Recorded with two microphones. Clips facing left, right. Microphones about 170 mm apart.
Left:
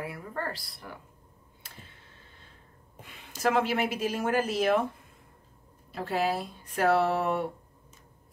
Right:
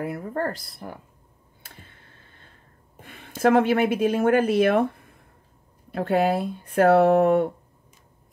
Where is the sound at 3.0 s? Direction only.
55° right (ahead or behind).